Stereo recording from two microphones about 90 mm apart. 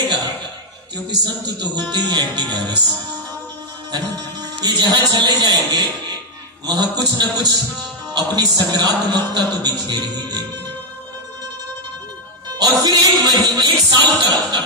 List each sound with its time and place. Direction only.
1.2 s speech: 50° right (ahead or behind)
3.9 s a man's voice: 50° right (ahead or behind)
12.5 s speech: 50° right (ahead or behind)